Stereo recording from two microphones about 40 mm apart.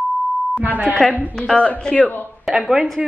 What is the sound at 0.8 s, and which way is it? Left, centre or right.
Speech, centre.